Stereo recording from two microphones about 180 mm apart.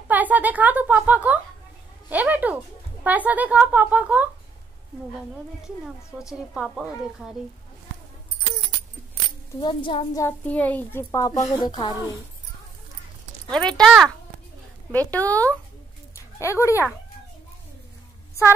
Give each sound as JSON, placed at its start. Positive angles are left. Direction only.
{"t": 0.1, "sound": "a woman's voice", "side_deg": -10}
{"t": 6.3, "sound": "speech", "side_deg": 0}
{"t": 9.6, "sound": "a child's voice", "side_deg": 25}
{"t": 10.2, "sound": "a child's voice", "side_deg": 10}
{"t": 13.5, "sound": "a child's voice", "side_deg": 5}